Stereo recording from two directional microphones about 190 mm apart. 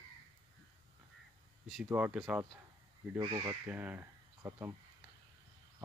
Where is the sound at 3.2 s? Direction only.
20° right (ahead or behind).